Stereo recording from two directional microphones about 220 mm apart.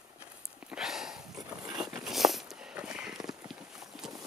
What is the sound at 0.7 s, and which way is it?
Sniff, centre (ahead or behind).